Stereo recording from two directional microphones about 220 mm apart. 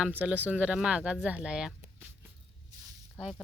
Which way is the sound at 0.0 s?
5° right (ahead or behind).